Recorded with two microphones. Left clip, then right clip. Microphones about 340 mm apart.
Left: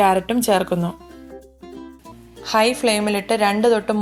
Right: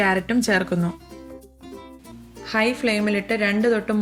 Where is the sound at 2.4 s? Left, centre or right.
Centre.